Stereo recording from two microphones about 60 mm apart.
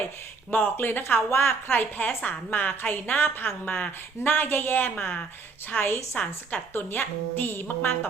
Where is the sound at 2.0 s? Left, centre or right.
Left.